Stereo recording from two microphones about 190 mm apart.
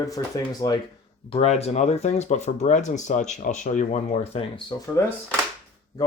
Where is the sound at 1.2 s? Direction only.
30° left (ahead or behind).